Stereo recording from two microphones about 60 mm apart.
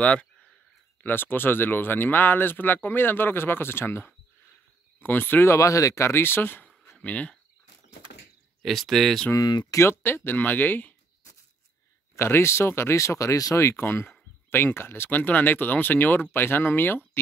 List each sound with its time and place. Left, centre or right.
0.0 s a sound: centre
1.0 s speech: left
5.0 s speech: left
5.5 s speech: left
7.0 s speech: left
8.6 s speech: centre
9.3 s speech: left
9.8 s speech: left
12.2 s speech: left
13.7 s speech: left